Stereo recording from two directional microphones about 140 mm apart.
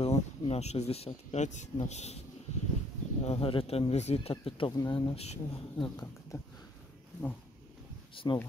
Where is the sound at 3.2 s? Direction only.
45° left (ahead or behind).